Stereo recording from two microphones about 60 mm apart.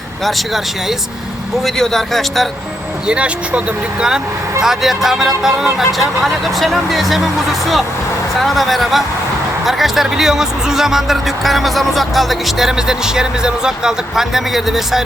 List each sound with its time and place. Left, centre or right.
0.3 s speech: centre
3.1 s speech: centre
4.6 s speech: centre
8.4 s speech: centre